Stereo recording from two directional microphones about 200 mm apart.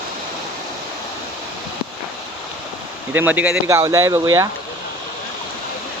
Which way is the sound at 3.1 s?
10° right (ahead or behind).